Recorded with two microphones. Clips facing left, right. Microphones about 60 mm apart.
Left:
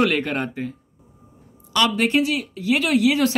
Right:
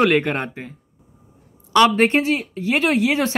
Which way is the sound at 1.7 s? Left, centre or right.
Right.